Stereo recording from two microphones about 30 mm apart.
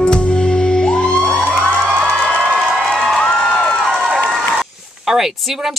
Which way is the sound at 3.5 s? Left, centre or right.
Left.